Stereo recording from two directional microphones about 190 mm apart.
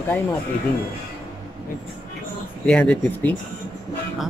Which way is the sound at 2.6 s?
5° left (ahead or behind).